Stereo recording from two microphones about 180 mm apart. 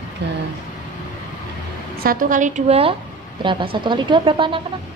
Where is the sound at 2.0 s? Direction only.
50° right (ahead or behind); by 4.6 s 30° right (ahead or behind).